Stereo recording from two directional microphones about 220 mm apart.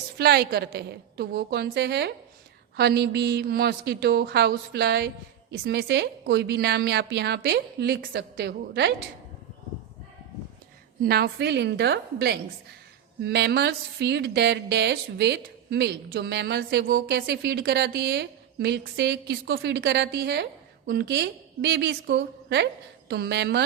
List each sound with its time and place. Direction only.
0.2 s speech: 45° right (ahead or behind)
11.0 s speech: 45° right (ahead or behind)